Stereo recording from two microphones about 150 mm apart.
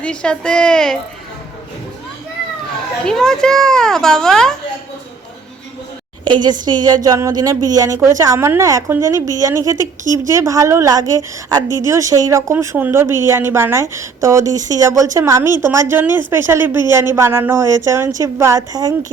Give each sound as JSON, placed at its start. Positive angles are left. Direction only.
{"t": 0.0, "sound": "speech", "side_deg": 5}
{"t": 3.0, "sound": "speech", "side_deg": 5}
{"t": 6.2, "sound": "a woman's voice", "side_deg": -30}